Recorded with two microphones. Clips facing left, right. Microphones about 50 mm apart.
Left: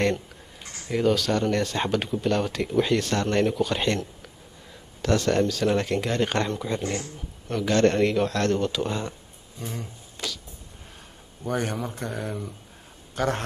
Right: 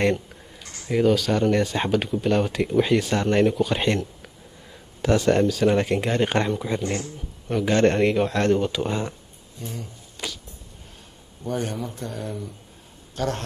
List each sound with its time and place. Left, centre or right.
0.8 s speech: centre
10.2 s a sound: centre
11.4 s a man's voice: left